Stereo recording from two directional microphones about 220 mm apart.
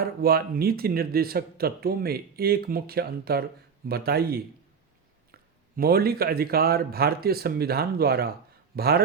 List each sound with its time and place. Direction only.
0.0 s speech: 45° right (ahead or behind)